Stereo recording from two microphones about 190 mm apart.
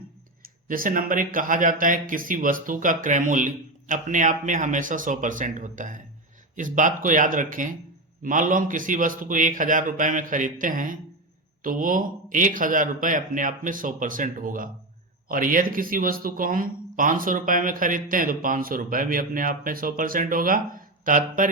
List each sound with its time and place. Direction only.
0.4 s speech: 45° right (ahead or behind)